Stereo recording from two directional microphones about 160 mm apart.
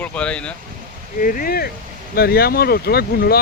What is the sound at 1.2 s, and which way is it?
Speech, 60° left (ahead or behind).